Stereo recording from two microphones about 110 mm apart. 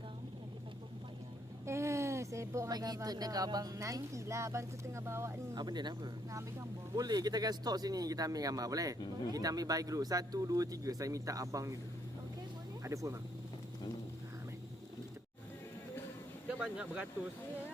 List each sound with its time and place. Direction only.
1.6 s a woman's voice: 25° right (ahead or behind)
5.5 s speech: 40° right (ahead or behind)
12.8 s speech: 30° right (ahead or behind)
16.6 s speech: 5° right (ahead or behind)